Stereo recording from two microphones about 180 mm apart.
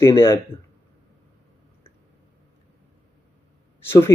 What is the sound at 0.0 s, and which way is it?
Speech, 15° left (ahead or behind).